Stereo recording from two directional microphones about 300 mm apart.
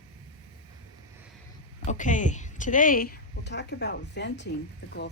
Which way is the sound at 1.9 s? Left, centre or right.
Left.